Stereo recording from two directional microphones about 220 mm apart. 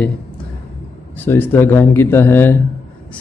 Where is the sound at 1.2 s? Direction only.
10° left (ahead or behind).